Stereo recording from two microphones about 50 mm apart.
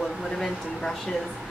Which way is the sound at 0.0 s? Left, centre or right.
Centre.